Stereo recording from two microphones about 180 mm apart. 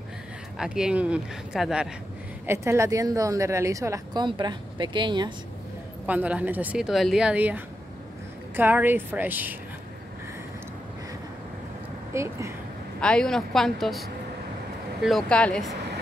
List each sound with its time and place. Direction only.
0.6 s speech: 5° right (ahead or behind)
2.4 s a woman's voice: 15° right (ahead or behind)
6.0 s speech: 10° right (ahead or behind)
12.1 s a woman's voice: 15° right (ahead or behind)
13.0 s speech: 5° left (ahead or behind)